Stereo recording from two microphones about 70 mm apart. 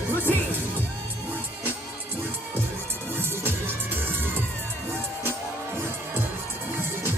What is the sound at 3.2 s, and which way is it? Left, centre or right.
Music, right.